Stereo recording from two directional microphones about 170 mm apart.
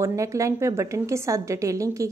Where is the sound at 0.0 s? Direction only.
20° right (ahead or behind).